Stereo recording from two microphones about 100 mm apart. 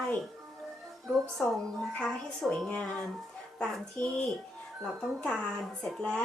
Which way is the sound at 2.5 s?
10° left (ahead or behind).